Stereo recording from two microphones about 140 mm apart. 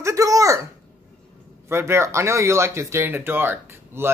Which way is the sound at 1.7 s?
15° right (ahead or behind).